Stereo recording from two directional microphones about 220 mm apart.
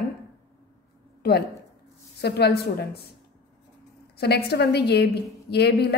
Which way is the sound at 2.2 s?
50° left (ahead or behind).